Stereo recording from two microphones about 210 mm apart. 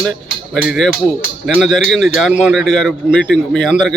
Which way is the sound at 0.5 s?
Centre (ahead or behind).